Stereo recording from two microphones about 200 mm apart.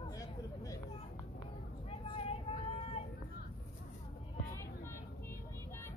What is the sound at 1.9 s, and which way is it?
Vehicle, 30° left (ahead or behind).